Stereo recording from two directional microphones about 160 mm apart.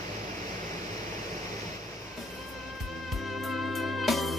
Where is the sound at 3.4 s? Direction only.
Centre (ahead or behind).